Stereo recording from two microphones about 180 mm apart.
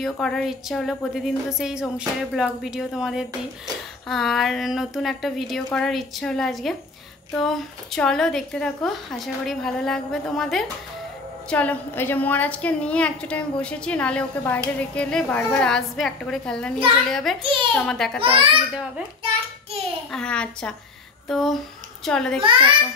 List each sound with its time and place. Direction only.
0.0 s a woman's voice: centre (ahead or behind)
17.4 s a child's voice: 30° right (ahead or behind)
17.7 s a woman's voice: 5° left (ahead or behind)
20.1 s a woman's voice: 5° left (ahead or behind)
22.4 s a child's voice: 30° right (ahead or behind)